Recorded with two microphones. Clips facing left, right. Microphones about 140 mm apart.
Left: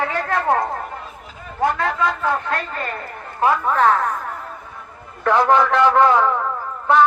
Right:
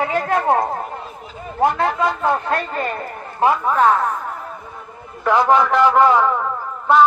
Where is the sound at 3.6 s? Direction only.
10° right (ahead or behind).